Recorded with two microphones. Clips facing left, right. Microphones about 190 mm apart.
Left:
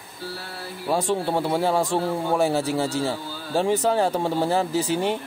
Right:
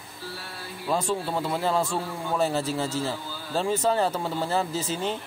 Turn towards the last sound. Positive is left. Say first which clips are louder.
# left 6 dB
turn(degrees=15)  # may be behind; listen again after turning